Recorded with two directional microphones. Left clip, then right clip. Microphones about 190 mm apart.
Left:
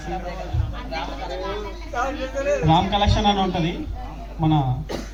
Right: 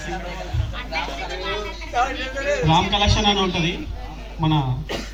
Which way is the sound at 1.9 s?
55° left (ahead or behind).